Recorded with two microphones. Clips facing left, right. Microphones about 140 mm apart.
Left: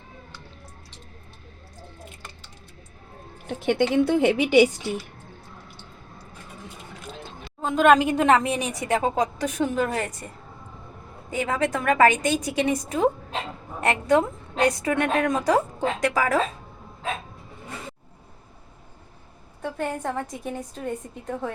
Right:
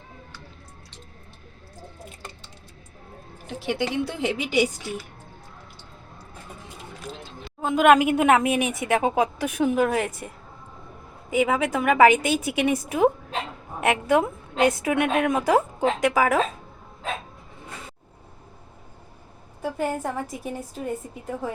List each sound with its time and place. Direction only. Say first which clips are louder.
3.4 s a woman's voice: left 4 dB; 50° left (ahead or behind)
7.6 s a woman's voice: right 1 dB; 5° right (ahead or behind)
19.6 s a woman's voice: right 2 dB; 5° right (ahead or behind)